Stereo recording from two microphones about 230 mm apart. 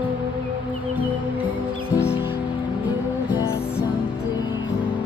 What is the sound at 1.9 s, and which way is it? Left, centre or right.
Music, centre.